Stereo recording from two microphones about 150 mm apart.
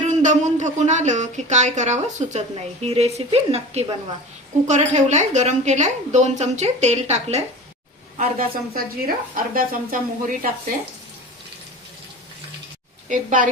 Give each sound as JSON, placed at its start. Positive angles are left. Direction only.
{"t": 0.1, "sound": "a woman's voice", "side_deg": -55}
{"t": 8.2, "sound": "speech", "side_deg": -75}
{"t": 13.1, "sound": "a woman's voice", "side_deg": -60}